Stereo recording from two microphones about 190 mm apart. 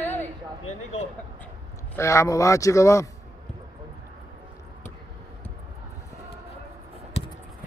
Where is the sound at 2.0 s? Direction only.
15° left (ahead or behind).